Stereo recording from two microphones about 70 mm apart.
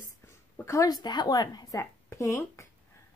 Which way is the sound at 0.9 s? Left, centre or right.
Left.